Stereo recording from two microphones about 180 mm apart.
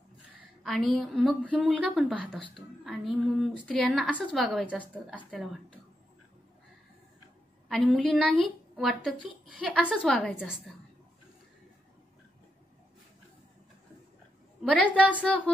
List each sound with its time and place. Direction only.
0.7 s speech: centre (ahead or behind)
7.6 s speech: centre (ahead or behind)
14.6 s a woman's voice: 5° left (ahead or behind)